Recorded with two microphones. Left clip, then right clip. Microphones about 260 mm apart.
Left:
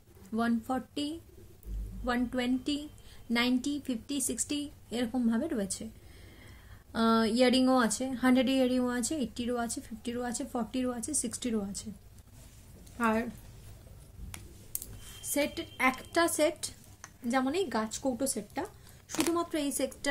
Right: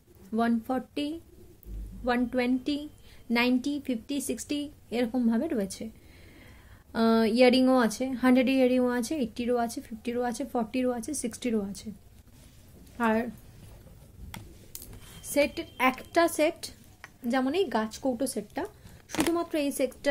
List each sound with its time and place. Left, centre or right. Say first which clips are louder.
0.3 s speech: right 4 dB; centre
6.9 s speech: right 3 dB; centre
12.9 s a woman's voice: right 3 dB; centre
14.3 s tick: right 4 dB; centre
15.2 s speech: right 6 dB; centre